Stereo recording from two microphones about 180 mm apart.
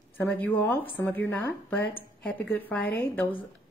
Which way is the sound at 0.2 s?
10° left (ahead or behind).